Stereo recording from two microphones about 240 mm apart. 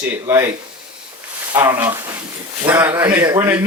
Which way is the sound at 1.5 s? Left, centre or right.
Centre.